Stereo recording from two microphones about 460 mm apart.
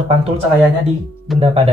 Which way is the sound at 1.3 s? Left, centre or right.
Centre.